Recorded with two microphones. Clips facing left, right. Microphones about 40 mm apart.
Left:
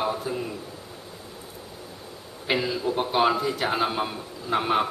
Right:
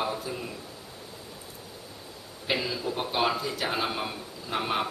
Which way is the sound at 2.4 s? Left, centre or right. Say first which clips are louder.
Left 4 dB; centre.